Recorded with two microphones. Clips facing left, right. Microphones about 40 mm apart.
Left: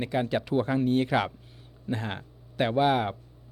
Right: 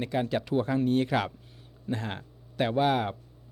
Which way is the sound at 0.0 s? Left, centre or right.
Centre.